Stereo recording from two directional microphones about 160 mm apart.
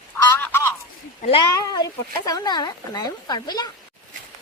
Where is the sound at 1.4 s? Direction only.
25° left (ahead or behind).